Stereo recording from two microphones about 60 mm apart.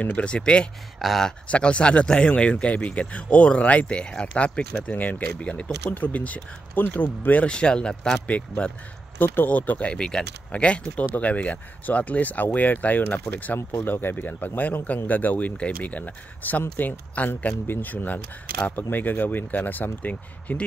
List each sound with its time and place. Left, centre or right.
0.0 s speech: left
0.9 s speech: centre
1.5 s speech: centre
7.4 s speech: centre
9.2 s speech: left
9.9 s speech: centre